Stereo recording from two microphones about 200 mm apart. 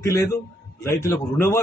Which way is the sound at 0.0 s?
15° left (ahead or behind).